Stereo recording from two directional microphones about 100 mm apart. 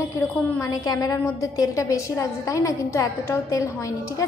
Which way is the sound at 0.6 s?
35° left (ahead or behind).